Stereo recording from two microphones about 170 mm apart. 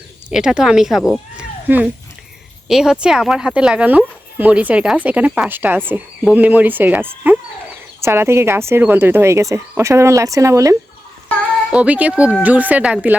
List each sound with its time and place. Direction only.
0.3 s speech: 5° right (ahead or behind)
11.7 s speech: 10° right (ahead or behind)